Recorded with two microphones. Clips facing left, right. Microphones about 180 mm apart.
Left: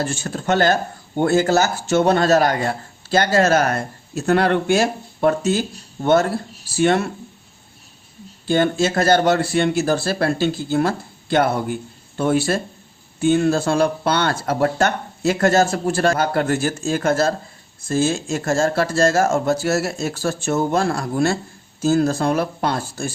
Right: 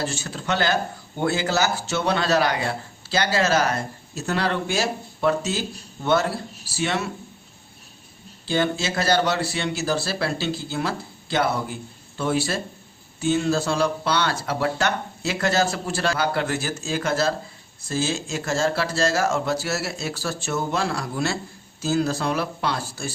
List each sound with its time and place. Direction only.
0.0 s speech: 50° left (ahead or behind)
8.4 s speech: 50° left (ahead or behind)